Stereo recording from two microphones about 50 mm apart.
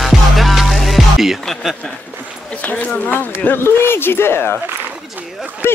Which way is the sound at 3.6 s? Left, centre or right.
Left.